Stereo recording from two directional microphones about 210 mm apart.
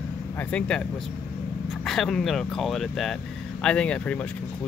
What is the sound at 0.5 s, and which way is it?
Speech, 5° left (ahead or behind).